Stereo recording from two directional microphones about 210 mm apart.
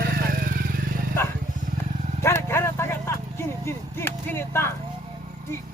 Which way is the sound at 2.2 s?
10° left (ahead or behind).